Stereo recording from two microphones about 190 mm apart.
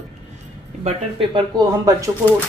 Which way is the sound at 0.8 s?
25° right (ahead or behind).